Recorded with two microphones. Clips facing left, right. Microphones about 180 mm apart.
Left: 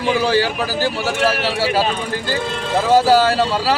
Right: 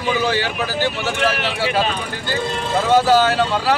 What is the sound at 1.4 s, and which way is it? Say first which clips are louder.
Speech: left 2 dB; 5° left (ahead or behind).